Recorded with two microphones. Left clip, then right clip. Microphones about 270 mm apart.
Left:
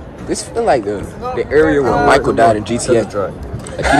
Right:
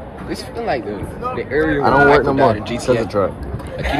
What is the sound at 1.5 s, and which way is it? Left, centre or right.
Speech, left.